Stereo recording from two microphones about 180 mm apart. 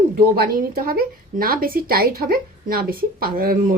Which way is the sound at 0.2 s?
55° right (ahead or behind).